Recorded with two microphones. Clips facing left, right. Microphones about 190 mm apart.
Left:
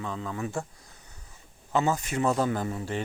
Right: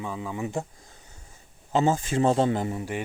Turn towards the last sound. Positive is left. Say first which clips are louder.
# right 2 dB
turn(degrees=-15)  # may be behind; listen again after turning